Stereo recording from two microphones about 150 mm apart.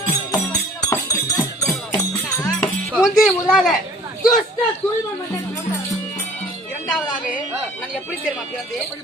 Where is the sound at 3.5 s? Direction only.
Centre (ahead or behind).